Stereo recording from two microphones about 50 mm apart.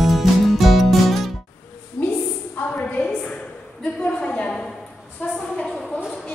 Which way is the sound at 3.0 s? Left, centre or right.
Centre.